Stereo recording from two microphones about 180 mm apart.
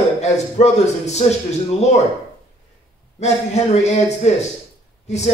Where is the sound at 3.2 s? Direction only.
40° left (ahead or behind).